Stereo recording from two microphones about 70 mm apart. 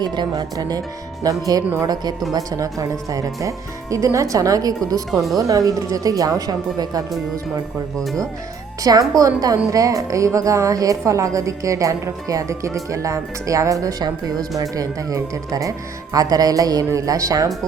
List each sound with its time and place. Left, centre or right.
0.0 s speech: right
8.8 s a woman's voice: right
14.0 s speech: right